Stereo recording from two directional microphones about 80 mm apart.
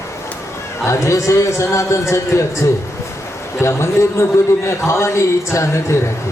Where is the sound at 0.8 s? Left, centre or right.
Left.